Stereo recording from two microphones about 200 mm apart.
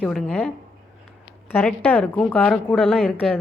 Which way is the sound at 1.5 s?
10° left (ahead or behind).